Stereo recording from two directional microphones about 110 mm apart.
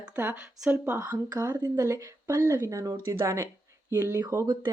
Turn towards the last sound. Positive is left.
turn(degrees=-25)  # may be behind; listen again after turning